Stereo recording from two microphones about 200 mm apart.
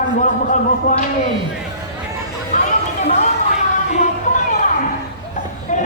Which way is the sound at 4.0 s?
40° left (ahead or behind).